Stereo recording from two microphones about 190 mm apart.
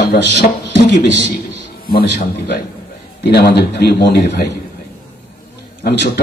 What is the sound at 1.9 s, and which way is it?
A man's voice, 55° left (ahead or behind).